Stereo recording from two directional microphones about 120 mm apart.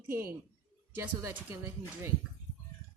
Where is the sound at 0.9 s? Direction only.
20° right (ahead or behind).